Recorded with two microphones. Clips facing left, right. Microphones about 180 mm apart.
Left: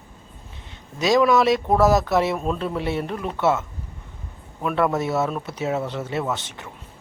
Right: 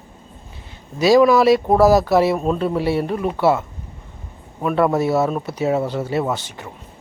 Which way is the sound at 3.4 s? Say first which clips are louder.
Right 3 dB; 35° right (ahead or behind).